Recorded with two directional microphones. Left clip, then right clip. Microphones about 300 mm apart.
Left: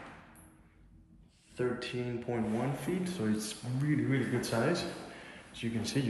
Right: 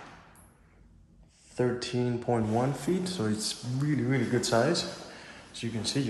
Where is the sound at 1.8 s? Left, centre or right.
Centre.